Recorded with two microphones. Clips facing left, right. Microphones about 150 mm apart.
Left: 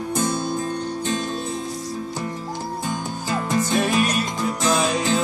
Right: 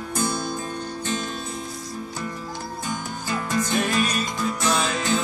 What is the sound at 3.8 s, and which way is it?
Music, 10° left (ahead or behind).